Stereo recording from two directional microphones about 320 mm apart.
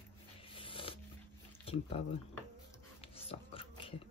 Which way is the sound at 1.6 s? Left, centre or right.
Centre.